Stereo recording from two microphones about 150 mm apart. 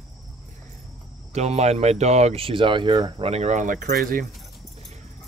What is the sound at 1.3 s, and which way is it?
Speech, 45° right (ahead or behind).